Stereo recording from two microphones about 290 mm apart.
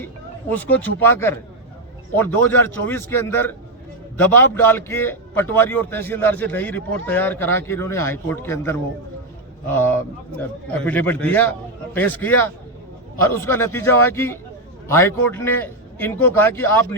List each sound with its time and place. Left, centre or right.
0.5 s a man's voice: centre
10.3 s a man's voice: centre